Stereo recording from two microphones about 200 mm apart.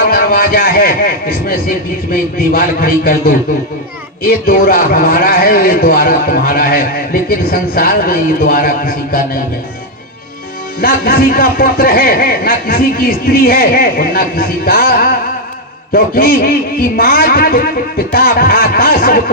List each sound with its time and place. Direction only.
0.1 s a man's voice: 45° left (ahead or behind)
10.8 s a man's voice: 50° left (ahead or behind)